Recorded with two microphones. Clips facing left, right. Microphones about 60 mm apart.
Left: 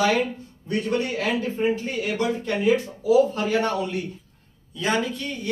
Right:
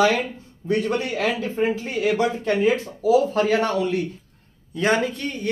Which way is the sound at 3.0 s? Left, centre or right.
Right.